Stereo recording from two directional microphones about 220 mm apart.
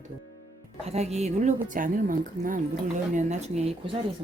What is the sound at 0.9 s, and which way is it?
Speech, 30° right (ahead or behind).